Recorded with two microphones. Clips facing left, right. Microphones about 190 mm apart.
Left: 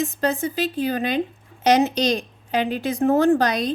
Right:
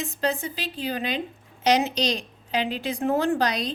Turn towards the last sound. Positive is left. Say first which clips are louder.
# left 6 dB
turn(degrees=50)  # may be behind; listen again after turning